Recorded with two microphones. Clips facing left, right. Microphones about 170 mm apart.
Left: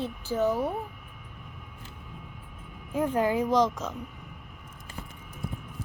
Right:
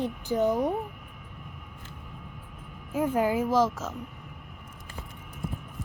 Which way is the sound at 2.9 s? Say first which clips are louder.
Even; 10° right (ahead or behind).